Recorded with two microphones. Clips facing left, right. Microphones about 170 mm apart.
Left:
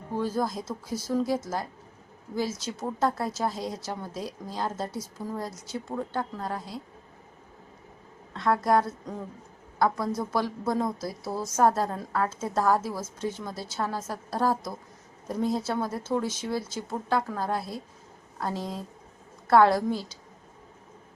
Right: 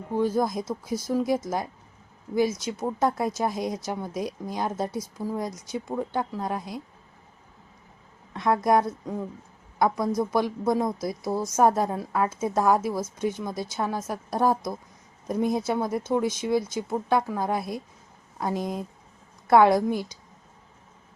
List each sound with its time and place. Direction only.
0.1 s a woman's voice: 15° right (ahead or behind)
8.3 s a woman's voice: 15° right (ahead or behind)